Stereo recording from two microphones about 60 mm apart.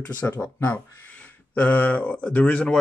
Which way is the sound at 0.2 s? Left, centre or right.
Left.